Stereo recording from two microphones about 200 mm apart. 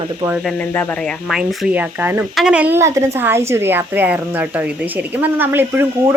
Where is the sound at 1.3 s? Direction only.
5° right (ahead or behind).